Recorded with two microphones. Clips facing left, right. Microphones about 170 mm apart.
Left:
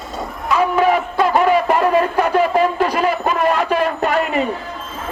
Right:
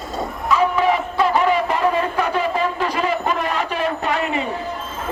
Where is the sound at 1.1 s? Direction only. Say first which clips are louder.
Left 3 dB; 45° left (ahead or behind).